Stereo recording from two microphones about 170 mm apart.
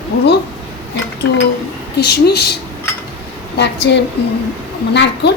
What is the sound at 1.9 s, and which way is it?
Speech, 75° left (ahead or behind).